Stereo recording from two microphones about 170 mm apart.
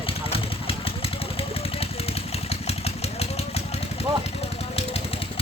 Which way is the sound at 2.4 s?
35° left (ahead or behind).